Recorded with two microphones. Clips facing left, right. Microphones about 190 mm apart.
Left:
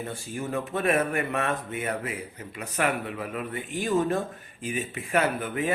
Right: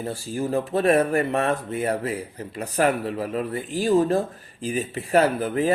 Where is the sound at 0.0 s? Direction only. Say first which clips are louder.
Right 6 dB; 35° right (ahead or behind).